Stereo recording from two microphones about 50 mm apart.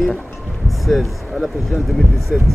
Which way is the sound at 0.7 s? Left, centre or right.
Centre.